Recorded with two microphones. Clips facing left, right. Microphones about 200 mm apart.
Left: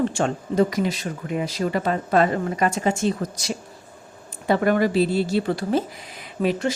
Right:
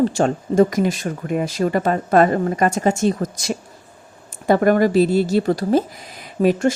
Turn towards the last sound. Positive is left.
turn(degrees=-40)  # may be behind; listen again after turning